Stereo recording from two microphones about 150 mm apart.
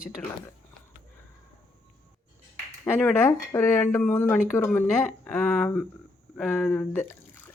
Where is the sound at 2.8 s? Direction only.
15° left (ahead or behind).